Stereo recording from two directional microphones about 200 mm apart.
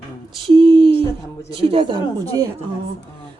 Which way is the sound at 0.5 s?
25° right (ahead or behind).